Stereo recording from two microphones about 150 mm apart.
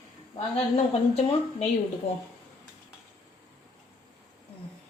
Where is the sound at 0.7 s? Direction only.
45° left (ahead or behind).